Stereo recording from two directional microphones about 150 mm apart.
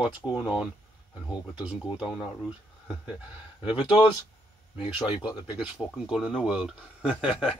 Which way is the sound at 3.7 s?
35° left (ahead or behind).